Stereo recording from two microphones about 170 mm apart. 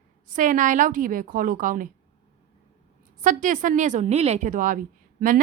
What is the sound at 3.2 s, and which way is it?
A woman's voice, 50° right (ahead or behind).